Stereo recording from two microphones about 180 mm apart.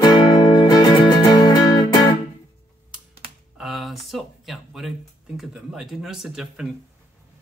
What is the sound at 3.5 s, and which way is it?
Speech, centre (ahead or behind).